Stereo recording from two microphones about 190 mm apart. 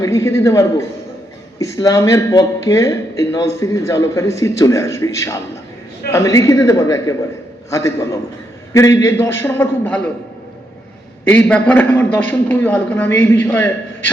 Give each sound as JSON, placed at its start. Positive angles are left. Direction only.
{"t": 0.0, "sound": "a man's voice", "side_deg": 15}
{"t": 11.3, "sound": "speech", "side_deg": 5}